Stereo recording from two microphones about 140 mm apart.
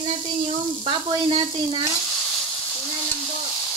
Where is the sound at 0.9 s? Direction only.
40° right (ahead or behind).